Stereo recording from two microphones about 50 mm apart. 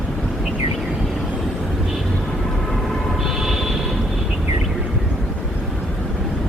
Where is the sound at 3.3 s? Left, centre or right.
Centre.